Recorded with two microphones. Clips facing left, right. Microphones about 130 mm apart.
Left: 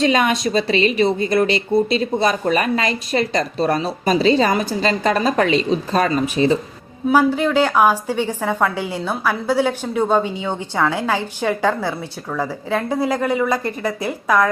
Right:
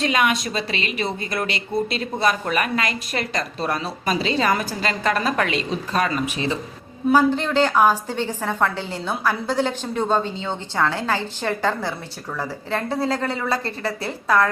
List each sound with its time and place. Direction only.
0.0 s speech: 30° left (ahead or behind)
7.1 s a woman's voice: 10° left (ahead or behind)